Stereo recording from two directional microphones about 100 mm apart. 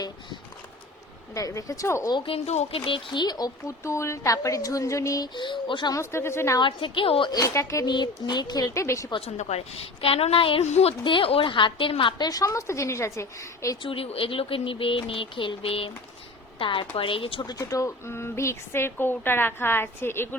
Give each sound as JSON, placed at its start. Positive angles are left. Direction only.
{"t": 1.3, "sound": "speech", "side_deg": 35}
{"t": 2.1, "sound": "speech", "side_deg": 70}
{"t": 5.3, "sound": "speech", "side_deg": 50}
{"t": 5.9, "sound": "a woman's voice", "side_deg": 30}
{"t": 6.6, "sound": "speech", "side_deg": 55}
{"t": 7.3, "sound": "speech", "side_deg": 35}
{"t": 7.9, "sound": "speech", "side_deg": 45}
{"t": 9.2, "sound": "a woman's voice", "side_deg": 90}
{"t": 11.1, "sound": "speech", "side_deg": 65}
{"t": 13.8, "sound": "speech", "side_deg": 70}
{"t": 17.4, "sound": "a woman's voice", "side_deg": 35}